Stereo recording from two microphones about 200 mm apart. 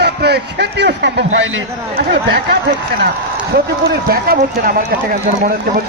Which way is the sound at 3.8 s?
50° right (ahead or behind).